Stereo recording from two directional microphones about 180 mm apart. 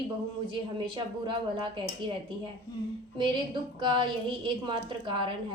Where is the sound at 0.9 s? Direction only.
30° right (ahead or behind).